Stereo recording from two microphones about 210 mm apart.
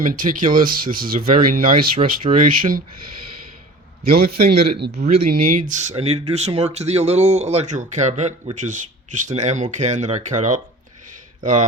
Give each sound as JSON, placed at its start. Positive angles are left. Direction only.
{"t": 0.1, "sound": "speech", "side_deg": -40}
{"t": 4.1, "sound": "speech", "side_deg": -50}
{"t": 6.0, "sound": "speech", "side_deg": -30}